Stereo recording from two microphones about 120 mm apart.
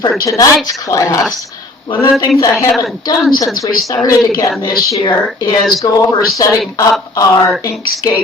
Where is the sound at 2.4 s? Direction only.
25° left (ahead or behind).